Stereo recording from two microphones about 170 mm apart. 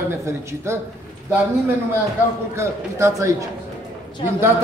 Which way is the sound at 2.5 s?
15° right (ahead or behind).